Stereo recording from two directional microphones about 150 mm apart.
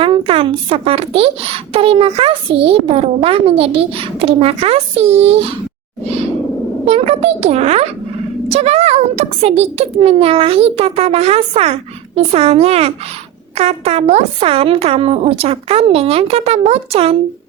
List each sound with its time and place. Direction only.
0.0 s a woman's voice: 40° right (ahead or behind)
6.8 s a child's voice: 40° right (ahead or behind)